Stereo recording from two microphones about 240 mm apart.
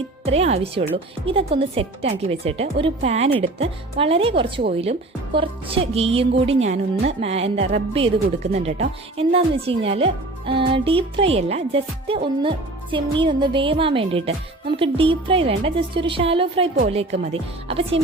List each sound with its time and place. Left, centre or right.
0.3 s speech: right